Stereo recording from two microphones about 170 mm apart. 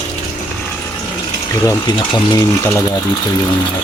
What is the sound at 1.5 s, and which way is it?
Speech, 20° left (ahead or behind).